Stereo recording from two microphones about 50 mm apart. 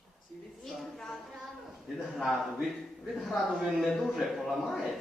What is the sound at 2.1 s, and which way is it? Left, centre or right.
A man's voice, centre.